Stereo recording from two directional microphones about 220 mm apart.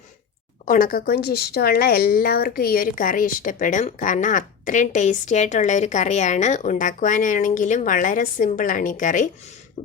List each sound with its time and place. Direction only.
0.6 s speech: 40° left (ahead or behind)